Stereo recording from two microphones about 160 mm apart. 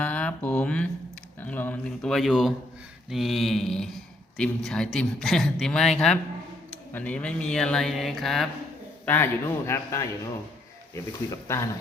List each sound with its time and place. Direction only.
0.0 s a sound: 10° left (ahead or behind)
1.4 s speech: 10° left (ahead or behind)
9.0 s a man's voice: 15° left (ahead or behind)